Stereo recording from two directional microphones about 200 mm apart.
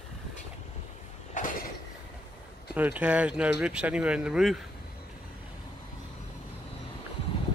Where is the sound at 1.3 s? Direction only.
45° left (ahead or behind).